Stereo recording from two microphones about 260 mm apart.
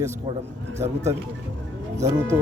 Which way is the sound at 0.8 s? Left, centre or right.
Centre.